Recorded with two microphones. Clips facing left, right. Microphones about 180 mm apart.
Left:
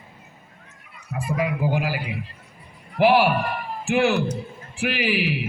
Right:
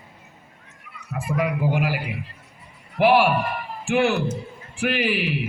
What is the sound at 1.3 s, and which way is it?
A man's voice, 5° left (ahead or behind).